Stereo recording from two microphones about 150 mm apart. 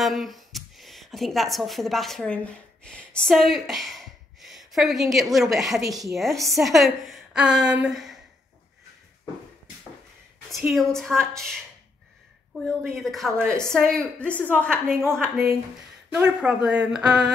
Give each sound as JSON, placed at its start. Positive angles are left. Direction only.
{"t": 0.0, "sound": "a woman's voice", "side_deg": 0}
{"t": 10.7, "sound": "a woman's voice", "side_deg": 0}
{"t": 13.4, "sound": "a woman's voice", "side_deg": -20}
{"t": 13.8, "sound": "a woman's voice", "side_deg": 5}